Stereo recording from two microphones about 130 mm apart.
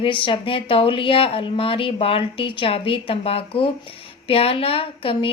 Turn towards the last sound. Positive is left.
turn(degrees=45)  # may be behind; listen again after turning